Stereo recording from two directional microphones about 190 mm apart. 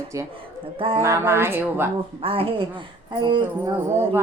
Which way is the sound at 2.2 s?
30° right (ahead or behind).